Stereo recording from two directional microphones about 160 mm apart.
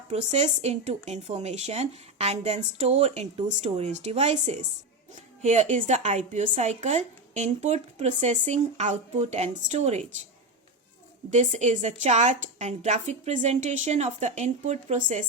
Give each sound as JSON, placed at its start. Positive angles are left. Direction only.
{"t": 0.1, "sound": "a woman's voice", "side_deg": -45}
{"t": 11.3, "sound": "a woman's voice", "side_deg": -45}